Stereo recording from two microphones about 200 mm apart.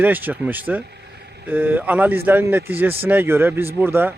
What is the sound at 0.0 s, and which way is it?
Speech, 10° right (ahead or behind).